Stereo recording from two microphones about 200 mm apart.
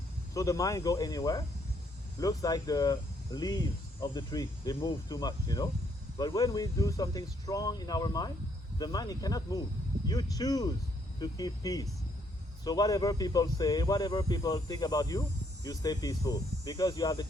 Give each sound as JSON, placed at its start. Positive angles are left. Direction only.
{"t": 0.3, "sound": "speech", "side_deg": 15}